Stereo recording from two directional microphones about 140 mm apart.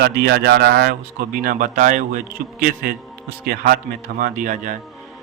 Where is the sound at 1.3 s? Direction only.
75° right (ahead or behind).